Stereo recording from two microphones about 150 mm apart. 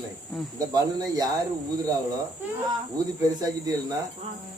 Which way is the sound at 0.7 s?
25° right (ahead or behind).